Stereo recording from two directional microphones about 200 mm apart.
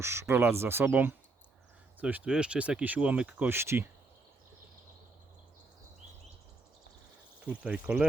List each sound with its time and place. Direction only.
0.0 s speech: 15° right (ahead or behind)
7.3 s speech: 5° right (ahead or behind)